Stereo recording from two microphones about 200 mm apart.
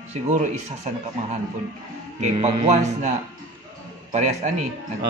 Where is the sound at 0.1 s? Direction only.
40° right (ahead or behind).